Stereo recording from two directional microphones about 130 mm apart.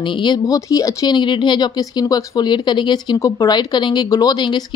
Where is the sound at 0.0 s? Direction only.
35° left (ahead or behind).